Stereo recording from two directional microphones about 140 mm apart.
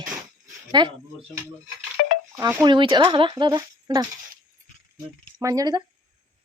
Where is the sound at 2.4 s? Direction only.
15° right (ahead or behind).